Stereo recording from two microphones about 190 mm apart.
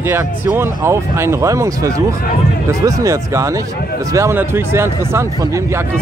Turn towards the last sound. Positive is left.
turn(degrees=-15)  # may be behind; listen again after turning